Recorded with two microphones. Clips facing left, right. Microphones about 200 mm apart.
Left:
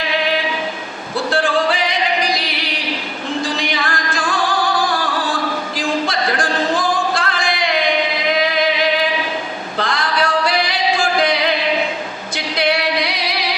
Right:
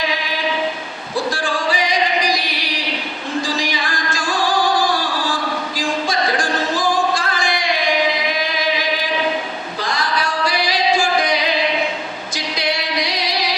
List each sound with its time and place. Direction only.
3.6 s music: 60° left (ahead or behind)
5.7 s singing: 60° left (ahead or behind)
9.7 s male singing: 60° left (ahead or behind)
12.5 s music: 60° left (ahead or behind)